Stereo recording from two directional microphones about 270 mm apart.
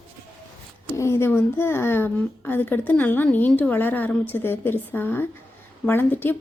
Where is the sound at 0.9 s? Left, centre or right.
Centre.